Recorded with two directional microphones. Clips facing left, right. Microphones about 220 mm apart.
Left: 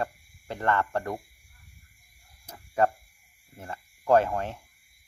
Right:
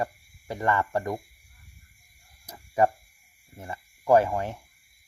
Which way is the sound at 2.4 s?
10° right (ahead or behind).